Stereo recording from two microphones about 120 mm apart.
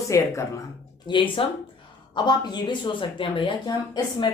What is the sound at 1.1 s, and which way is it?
Speech, 40° left (ahead or behind).